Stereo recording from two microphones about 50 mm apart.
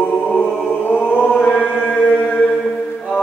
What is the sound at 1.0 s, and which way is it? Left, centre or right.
Chant, left.